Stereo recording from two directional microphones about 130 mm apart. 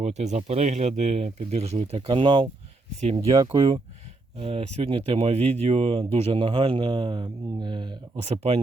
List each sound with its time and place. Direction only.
0.0 s speech: 60° right (ahead or behind)
1.8 s speech: 40° right (ahead or behind)
3.2 s speech: 25° right (ahead or behind)
3.5 s speech: 45° right (ahead or behind)
8.2 s speech: 50° right (ahead or behind)